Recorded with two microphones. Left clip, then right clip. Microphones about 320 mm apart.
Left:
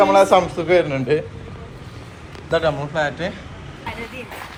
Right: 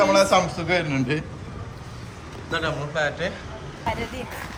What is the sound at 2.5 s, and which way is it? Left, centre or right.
Speech, centre.